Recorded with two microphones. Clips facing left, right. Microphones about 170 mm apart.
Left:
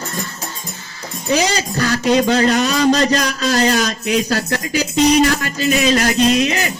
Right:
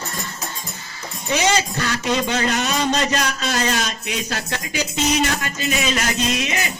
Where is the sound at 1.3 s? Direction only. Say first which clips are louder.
Left 2 dB; 35° left (ahead or behind).